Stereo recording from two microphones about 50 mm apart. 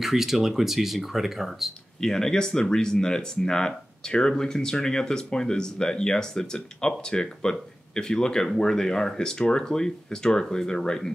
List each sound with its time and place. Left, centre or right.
0.0 s speech: centre
2.0 s speech: centre